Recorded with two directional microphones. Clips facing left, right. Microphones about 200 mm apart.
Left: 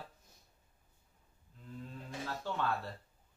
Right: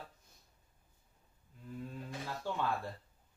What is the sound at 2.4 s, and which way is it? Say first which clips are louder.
Speech: even; 10° right (ahead or behind).